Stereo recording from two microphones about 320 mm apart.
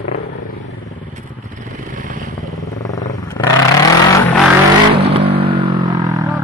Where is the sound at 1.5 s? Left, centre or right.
Right.